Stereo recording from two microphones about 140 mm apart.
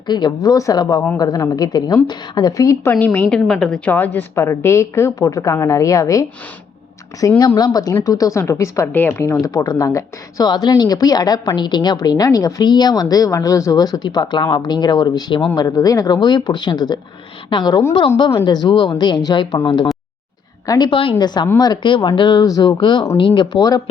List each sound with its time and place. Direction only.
0.1 s speech: 30° left (ahead or behind)
2.9 s speech: 10° left (ahead or behind); by 23.8 s 25° left (ahead or behind)